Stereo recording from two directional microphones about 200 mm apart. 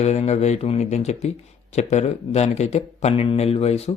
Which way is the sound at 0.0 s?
35° left (ahead or behind).